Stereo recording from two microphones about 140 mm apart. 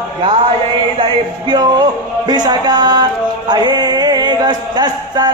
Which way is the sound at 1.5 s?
30° right (ahead or behind).